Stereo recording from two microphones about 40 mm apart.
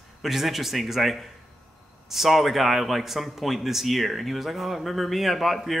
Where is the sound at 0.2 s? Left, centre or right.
Centre.